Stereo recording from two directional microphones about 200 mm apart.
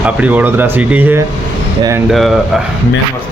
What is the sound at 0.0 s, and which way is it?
Speech, 5° right (ahead or behind).